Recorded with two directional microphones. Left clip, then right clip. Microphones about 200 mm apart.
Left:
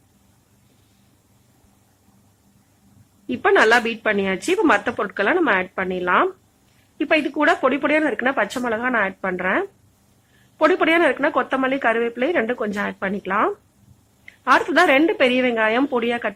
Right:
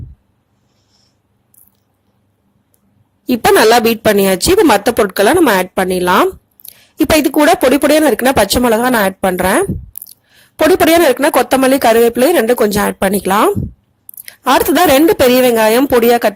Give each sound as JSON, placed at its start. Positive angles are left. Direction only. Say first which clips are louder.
{"t": 3.5, "sound": "speech", "louder": "right 7 dB", "side_deg": -40}
{"t": 10.8, "sound": "speech", "louder": "right 8 dB", "side_deg": -45}
{"t": 14.7, "sound": "speech", "louder": "right 7 dB", "side_deg": -45}